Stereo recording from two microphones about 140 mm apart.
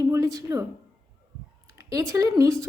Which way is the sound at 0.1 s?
25° right (ahead or behind).